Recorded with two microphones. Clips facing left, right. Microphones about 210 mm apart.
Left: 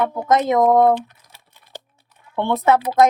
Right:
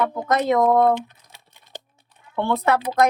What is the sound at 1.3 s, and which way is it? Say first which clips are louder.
Computer keyboard: left 1 dB; 15° right (ahead or behind).